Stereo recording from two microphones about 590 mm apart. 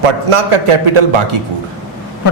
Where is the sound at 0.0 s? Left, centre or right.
Right.